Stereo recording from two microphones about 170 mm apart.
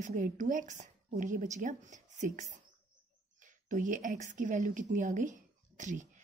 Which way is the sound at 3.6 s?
50° right (ahead or behind).